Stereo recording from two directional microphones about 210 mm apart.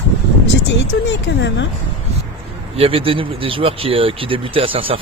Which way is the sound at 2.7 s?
25° right (ahead or behind).